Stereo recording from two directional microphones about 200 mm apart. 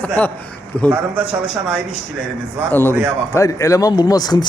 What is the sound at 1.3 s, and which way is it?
Speech, 5° right (ahead or behind).